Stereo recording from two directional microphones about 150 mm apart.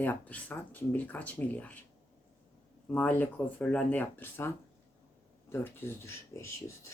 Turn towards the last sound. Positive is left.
turn(degrees=20)  # may be behind; listen again after turning